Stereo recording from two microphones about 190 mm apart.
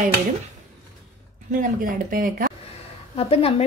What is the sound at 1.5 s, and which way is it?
A woman's voice, 45° right (ahead or behind).